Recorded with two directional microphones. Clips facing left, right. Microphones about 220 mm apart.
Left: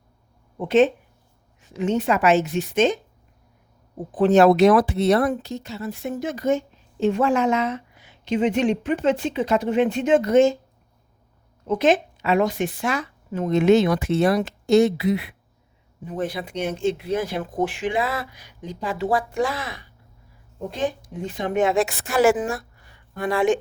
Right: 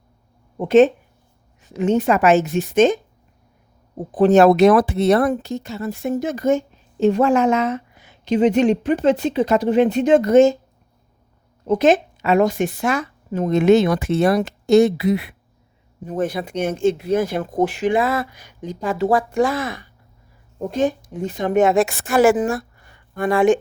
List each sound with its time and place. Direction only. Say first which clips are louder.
0.6 s speech: right 5 dB; 45° right (ahead or behind)
4.1 s speech: right 3 dB; 40° right (ahead or behind)
11.6 s a woman's voice: right 4 dB; 40° right (ahead or behind)